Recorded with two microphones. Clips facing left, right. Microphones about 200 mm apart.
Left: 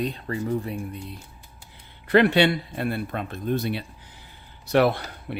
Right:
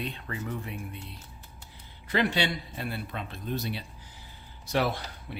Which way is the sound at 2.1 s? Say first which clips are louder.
Left 9 dB; 60° left (ahead or behind).